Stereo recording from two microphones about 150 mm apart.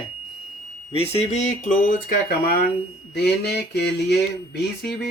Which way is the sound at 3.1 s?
90° left.